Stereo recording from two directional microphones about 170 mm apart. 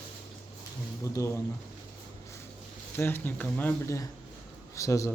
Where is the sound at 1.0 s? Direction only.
15° left (ahead or behind).